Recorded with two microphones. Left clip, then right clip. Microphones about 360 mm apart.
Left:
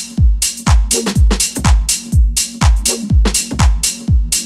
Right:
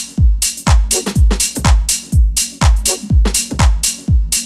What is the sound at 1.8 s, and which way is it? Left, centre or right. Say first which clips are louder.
Music: left 1 dB; right.